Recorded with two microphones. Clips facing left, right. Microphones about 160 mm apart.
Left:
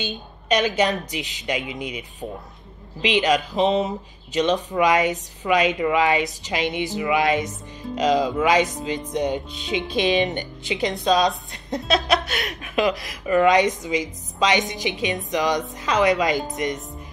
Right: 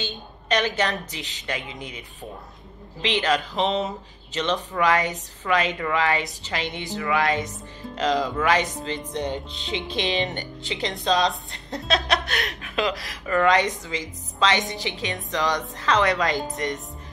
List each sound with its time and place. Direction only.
0.0 s speech: 20° left (ahead or behind)